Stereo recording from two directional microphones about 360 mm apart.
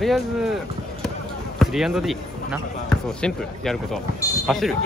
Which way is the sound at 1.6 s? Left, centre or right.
Centre.